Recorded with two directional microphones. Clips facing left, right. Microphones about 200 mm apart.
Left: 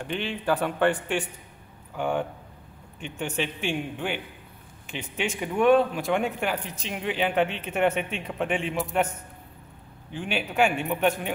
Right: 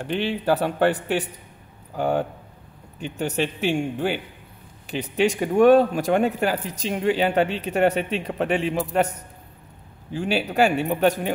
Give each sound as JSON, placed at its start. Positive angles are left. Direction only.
{"t": 0.0, "sound": "speech", "side_deg": -35}
{"t": 10.1, "sound": "speech", "side_deg": -40}